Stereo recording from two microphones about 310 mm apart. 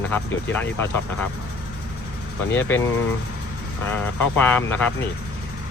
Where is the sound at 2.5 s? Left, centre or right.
Centre.